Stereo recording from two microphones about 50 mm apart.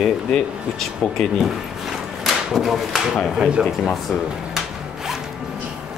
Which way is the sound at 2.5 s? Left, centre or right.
Centre.